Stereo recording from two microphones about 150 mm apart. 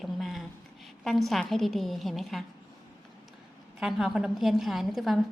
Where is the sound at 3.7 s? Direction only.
5° right (ahead or behind).